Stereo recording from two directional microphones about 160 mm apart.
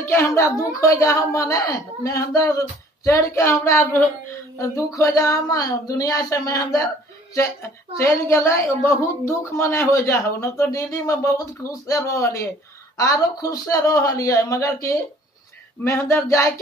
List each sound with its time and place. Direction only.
0.0 s speech: 15° left (ahead or behind)
8.0 s speech: 15° left (ahead or behind)